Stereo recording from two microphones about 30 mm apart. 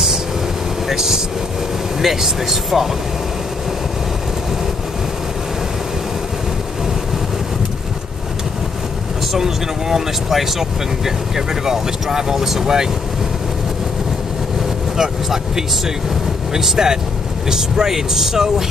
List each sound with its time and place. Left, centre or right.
0.8 s vehicle: centre
2.0 s speech: centre
9.3 s speech: centre
15.0 s speech: centre